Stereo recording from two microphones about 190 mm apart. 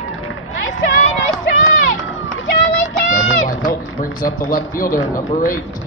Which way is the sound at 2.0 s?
90° left.